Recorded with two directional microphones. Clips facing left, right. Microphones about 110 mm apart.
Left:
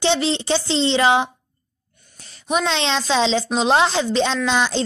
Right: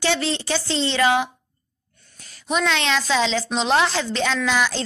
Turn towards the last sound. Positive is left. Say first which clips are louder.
# left 2 dB
turn(degrees=25)  # may be behind; listen again after turning